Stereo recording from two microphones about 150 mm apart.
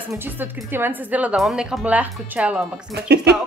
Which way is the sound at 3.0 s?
90° right.